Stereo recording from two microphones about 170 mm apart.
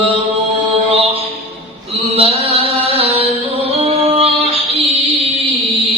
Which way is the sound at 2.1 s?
35° right (ahead or behind).